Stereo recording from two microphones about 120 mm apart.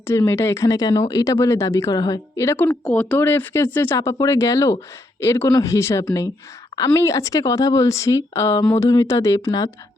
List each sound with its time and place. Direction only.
0.1 s speech: 20° left (ahead or behind)
2.8 s speech: 10° left (ahead or behind); by 9.6 s 30° left (ahead or behind)